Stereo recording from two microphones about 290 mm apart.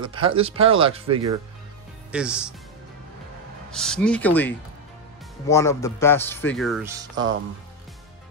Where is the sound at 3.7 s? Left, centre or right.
Centre.